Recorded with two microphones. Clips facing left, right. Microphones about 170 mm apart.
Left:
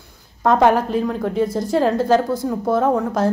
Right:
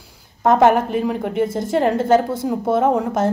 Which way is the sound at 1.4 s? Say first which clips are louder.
Even; 25° right (ahead or behind).